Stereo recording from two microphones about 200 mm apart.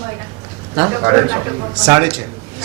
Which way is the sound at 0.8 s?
20° right (ahead or behind).